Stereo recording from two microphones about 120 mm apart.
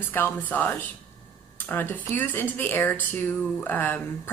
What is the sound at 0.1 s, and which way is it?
A woman's voice, 15° left (ahead or behind).